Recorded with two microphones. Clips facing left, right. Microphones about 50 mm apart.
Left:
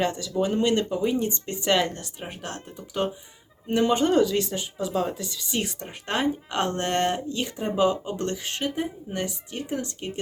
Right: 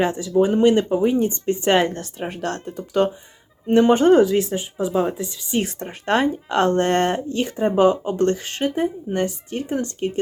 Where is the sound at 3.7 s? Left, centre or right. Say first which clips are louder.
Right 7 dB; right; by 5.2 s centre.